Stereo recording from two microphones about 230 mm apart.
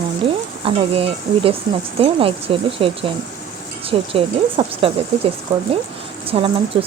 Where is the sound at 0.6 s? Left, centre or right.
Right.